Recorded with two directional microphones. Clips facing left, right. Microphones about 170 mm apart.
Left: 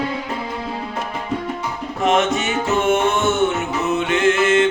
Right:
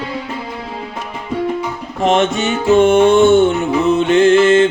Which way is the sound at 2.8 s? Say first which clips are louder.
Right 9 dB; 30° right (ahead or behind).